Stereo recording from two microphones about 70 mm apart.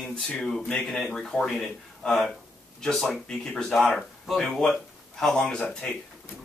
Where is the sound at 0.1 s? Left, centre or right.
Centre.